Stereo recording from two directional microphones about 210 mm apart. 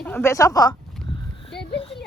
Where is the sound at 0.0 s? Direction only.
10° left (ahead or behind).